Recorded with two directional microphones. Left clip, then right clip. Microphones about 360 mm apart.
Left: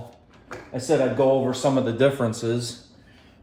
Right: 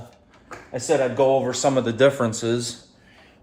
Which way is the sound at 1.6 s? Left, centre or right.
Right.